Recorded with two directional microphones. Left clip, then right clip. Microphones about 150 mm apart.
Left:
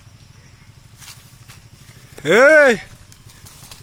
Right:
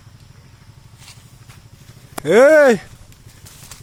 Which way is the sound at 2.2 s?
15° right (ahead or behind).